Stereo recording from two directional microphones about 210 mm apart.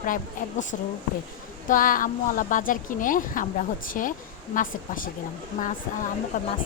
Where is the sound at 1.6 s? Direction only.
40° left (ahead or behind).